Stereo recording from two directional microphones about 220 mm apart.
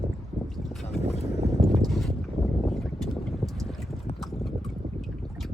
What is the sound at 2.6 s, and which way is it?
Boat, centre (ahead or behind).